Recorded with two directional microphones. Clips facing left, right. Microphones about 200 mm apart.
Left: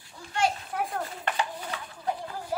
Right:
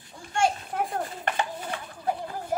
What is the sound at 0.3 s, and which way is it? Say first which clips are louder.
Children playing: right 2 dB; 50° right (ahead or behind).